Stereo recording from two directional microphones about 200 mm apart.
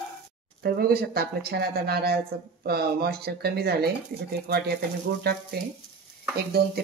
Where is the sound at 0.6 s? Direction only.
50° right (ahead or behind).